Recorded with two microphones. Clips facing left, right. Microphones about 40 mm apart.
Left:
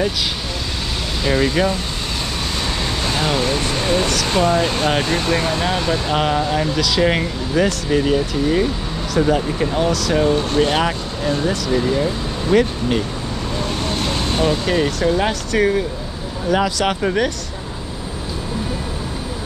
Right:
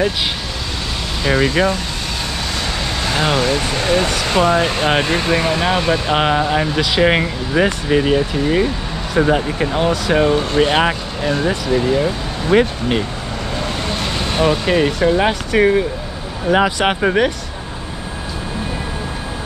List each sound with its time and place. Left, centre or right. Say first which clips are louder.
1.2 s speech: right 2 dB; centre
3.2 s speech: right 4 dB; right
11.6 s speech: right 3 dB; centre
14.3 s speech: right 4 dB; right